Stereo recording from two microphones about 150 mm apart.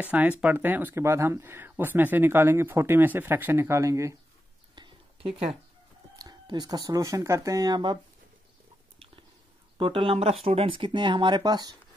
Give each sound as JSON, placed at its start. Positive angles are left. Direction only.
{"t": 0.0, "sound": "speech", "side_deg": -10}
{"t": 4.7, "sound": "a sound", "side_deg": -30}
{"t": 6.1, "sound": "speech", "side_deg": -25}
{"t": 9.8, "sound": "speech", "side_deg": -35}